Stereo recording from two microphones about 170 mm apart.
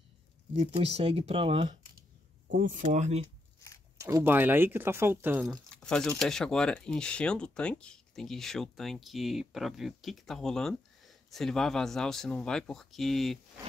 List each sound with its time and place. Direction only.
0.6 s speech: 35° right (ahead or behind)
2.5 s speech: 50° right (ahead or behind)
4.0 s speech: 15° right (ahead or behind)
5.4 s speech: 5° left (ahead or behind)